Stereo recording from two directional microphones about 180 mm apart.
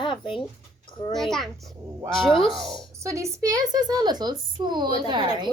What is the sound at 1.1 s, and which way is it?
A child's voice, centre (ahead or behind).